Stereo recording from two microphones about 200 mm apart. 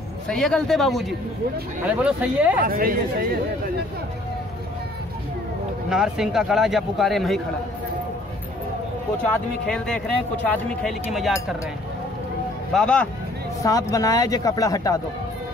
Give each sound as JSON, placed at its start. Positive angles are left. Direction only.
{"t": 0.3, "sound": "speech", "side_deg": 5}
{"t": 2.6, "sound": "speech", "side_deg": -45}
{"t": 5.9, "sound": "speech", "side_deg": -5}
{"t": 9.2, "sound": "speech", "side_deg": 5}
{"t": 12.7, "sound": "speech", "side_deg": 5}
{"t": 13.6, "sound": "a woman's voice", "side_deg": 15}